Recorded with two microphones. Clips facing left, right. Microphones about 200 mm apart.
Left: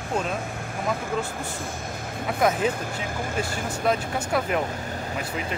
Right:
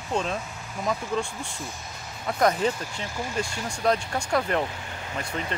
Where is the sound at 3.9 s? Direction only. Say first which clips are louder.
Right 1 dB; 5° left (ahead or behind).